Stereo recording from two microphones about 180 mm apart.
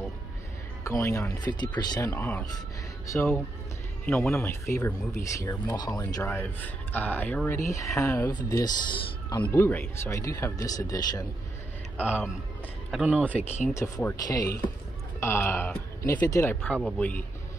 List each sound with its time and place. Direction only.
0.8 s a man's voice: 15° left (ahead or behind)
9.4 s speech: 10° left (ahead or behind)
12.0 s speech: 10° left (ahead or behind)
12.9 s speech: 5° right (ahead or behind)
13.4 s speech: 40° left (ahead or behind)
13.7 s a man's voice: 20° left (ahead or behind)